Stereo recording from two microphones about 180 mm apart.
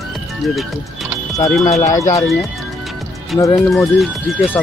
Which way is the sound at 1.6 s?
40° left (ahead or behind).